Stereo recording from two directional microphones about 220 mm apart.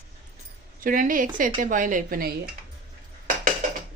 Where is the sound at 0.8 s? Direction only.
40° right (ahead or behind).